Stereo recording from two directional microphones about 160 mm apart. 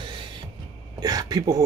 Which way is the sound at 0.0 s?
30° right (ahead or behind).